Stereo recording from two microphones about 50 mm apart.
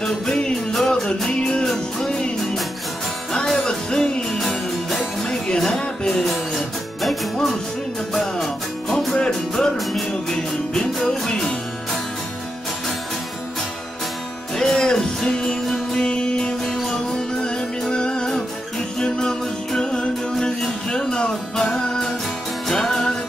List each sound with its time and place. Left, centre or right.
0.0 s music: centre
3.5 s music: centre
4.4 s music: centre
5.2 s music: centre
6.2 s music: centre
9.1 s music: centre
14.5 s music: centre